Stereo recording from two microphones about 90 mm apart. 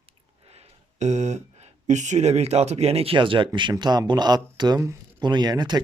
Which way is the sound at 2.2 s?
90° right.